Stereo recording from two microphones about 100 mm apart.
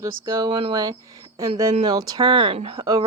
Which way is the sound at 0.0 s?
30° right (ahead or behind).